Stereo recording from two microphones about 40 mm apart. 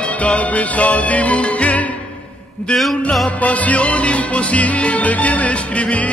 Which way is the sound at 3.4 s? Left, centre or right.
Left.